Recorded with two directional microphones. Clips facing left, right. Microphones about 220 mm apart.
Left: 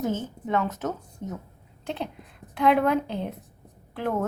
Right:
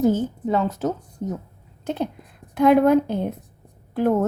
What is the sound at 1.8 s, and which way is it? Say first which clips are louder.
A woman's voice: right 6 dB; 45° right (ahead or behind).